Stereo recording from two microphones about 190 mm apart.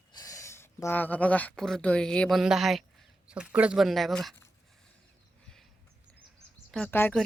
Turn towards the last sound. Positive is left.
turn(degrees=10)  # may be behind; listen again after turning